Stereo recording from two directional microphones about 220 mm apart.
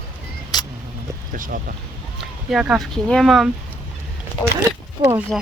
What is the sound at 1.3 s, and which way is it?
Speech, 40° right (ahead or behind).